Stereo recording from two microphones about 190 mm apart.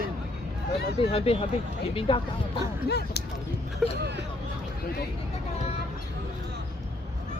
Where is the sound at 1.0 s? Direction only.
30° left (ahead or behind).